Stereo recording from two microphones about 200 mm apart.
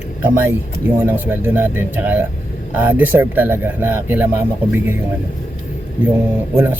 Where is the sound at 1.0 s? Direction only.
10° right (ahead or behind).